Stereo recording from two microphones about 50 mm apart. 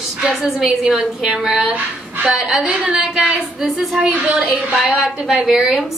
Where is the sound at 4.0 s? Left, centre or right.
Right.